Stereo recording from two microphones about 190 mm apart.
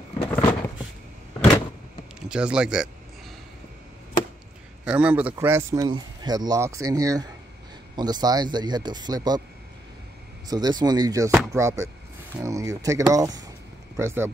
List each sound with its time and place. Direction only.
0.3 s a sound: 10° left (ahead or behind)
2.1 s speech: 5° right (ahead or behind)
4.8 s speech: 5° right (ahead or behind); by 9.4 s 20° right (ahead or behind)
10.5 s speech: 20° right (ahead or behind)